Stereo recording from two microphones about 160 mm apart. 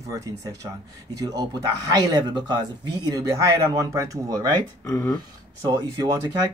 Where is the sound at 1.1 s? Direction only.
20° right (ahead or behind).